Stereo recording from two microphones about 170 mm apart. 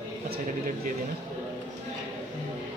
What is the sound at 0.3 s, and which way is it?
Speech, 50° right (ahead or behind).